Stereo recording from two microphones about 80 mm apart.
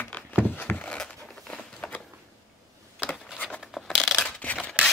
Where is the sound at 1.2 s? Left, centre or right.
Centre.